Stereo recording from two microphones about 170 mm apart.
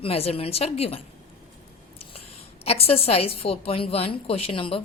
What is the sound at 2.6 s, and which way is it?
A woman's voice, 35° left (ahead or behind).